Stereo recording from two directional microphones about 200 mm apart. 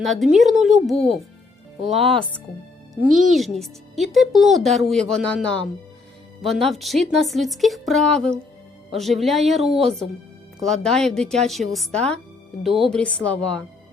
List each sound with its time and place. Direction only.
0.0 s speech: centre (ahead or behind)
2.0 s speech: 30° right (ahead or behind)
2.9 s speech: centre (ahead or behind)
6.7 s speech: centre (ahead or behind)